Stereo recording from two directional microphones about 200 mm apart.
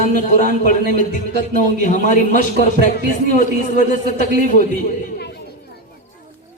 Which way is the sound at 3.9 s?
40° left (ahead or behind).